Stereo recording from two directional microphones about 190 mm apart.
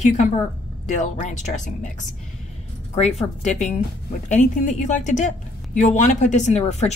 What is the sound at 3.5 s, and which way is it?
Speech, 40° left (ahead or behind).